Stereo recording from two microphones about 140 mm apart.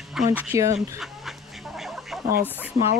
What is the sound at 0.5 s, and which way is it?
Speech, 20° right (ahead or behind).